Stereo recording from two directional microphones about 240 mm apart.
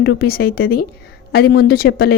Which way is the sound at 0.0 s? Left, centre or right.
Left.